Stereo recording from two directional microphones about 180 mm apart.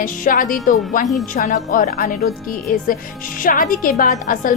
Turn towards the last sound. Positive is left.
turn(degrees=45)  # may be behind; listen again after turning